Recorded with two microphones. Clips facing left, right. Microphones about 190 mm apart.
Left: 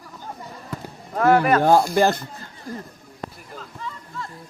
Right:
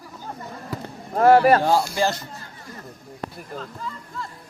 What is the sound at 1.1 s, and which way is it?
Speech, 35° right (ahead or behind).